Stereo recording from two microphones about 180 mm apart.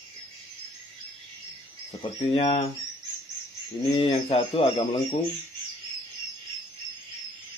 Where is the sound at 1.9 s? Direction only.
30° left (ahead or behind).